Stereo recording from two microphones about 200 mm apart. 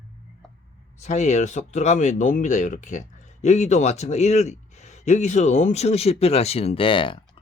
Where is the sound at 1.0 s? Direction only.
35° left (ahead or behind).